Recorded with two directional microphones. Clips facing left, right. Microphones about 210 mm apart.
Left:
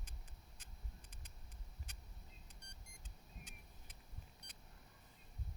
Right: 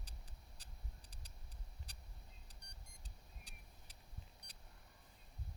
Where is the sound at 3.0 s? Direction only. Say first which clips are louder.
Left 7 dB; 35° right (ahead or behind).